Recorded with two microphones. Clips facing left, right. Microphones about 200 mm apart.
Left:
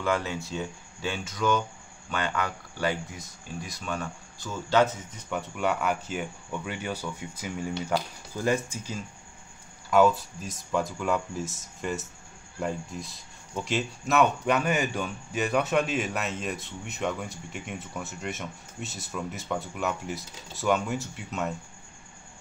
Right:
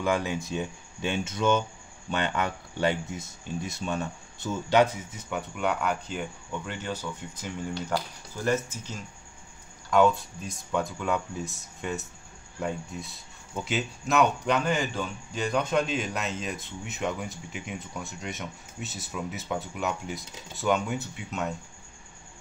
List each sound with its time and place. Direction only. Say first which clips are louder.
0.0 s speech: right 1 dB; 15° right (ahead or behind); by 21.5 s centre (ahead or behind)